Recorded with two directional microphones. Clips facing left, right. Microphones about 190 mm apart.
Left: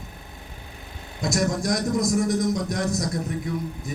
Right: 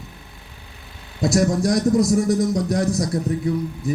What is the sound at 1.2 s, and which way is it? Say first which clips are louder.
A man's voice: right 6 dB; 35° right (ahead or behind).